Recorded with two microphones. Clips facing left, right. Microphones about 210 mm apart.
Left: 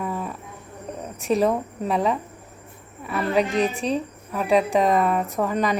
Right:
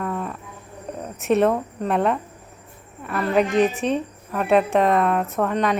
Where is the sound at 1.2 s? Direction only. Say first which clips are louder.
Right 2 dB; centre (ahead or behind).